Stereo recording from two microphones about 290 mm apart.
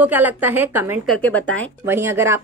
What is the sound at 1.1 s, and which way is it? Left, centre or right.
Speech, centre.